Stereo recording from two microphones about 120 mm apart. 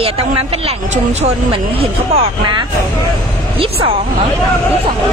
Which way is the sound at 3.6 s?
50° right (ahead or behind).